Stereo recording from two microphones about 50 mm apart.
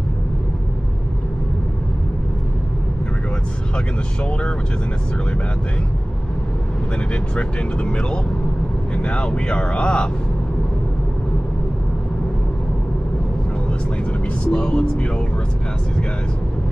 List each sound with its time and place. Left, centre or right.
3.7 s speech: left
7.3 s speech: left
14.4 s speech: centre